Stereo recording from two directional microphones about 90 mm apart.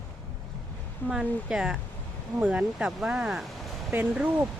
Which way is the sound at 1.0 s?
10° right (ahead or behind).